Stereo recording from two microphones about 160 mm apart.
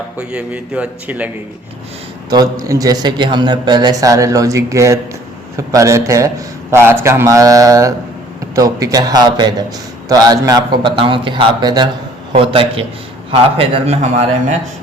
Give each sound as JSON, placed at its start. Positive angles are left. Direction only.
{"t": 0.2, "sound": "a man's voice", "side_deg": -5}
{"t": 2.3, "sound": "a man's voice", "side_deg": -20}